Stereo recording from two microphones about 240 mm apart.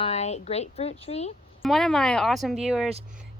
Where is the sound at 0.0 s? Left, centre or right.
Left.